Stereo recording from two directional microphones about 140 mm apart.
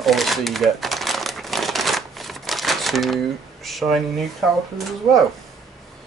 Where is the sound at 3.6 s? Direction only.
Centre (ahead or behind).